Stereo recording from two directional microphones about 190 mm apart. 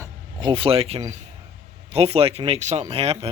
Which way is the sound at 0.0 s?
25° right (ahead or behind).